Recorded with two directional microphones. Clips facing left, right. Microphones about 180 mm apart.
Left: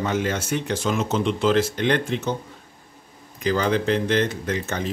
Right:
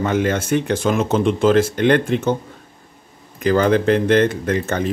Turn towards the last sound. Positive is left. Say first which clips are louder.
# right 6 dB
turn(degrees=-55)  # may be behind; listen again after turning